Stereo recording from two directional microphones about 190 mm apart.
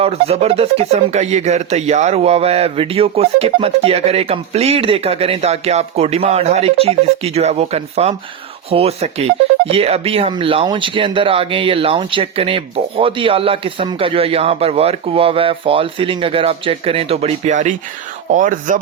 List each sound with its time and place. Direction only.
0.0 s speech: 30° right (ahead or behind)